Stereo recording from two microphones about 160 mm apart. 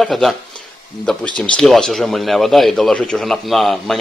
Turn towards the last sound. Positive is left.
turn(degrees=0)  # may be behind; listen again after turning